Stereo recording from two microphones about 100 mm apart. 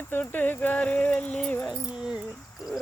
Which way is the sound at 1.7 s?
10° right (ahead or behind).